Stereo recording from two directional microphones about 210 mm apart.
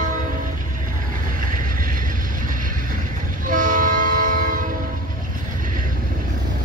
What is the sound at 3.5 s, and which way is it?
Train, 40° right (ahead or behind).